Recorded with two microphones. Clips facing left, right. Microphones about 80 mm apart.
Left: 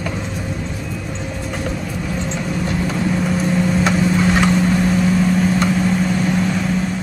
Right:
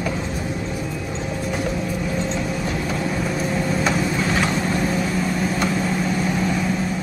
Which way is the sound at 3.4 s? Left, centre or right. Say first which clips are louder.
Left 3 dB; centre.